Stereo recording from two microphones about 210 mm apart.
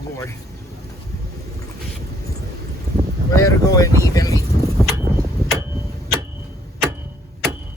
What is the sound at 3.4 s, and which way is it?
Speech, 15° left (ahead or behind).